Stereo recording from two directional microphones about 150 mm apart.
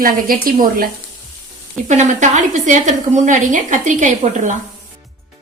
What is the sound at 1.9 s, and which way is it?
A woman's voice, 50° right (ahead or behind).